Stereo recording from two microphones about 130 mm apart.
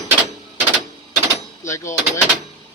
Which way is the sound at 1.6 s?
25° left (ahead or behind).